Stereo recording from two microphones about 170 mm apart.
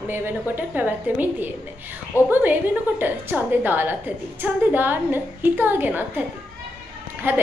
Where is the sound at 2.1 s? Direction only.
15° left (ahead or behind).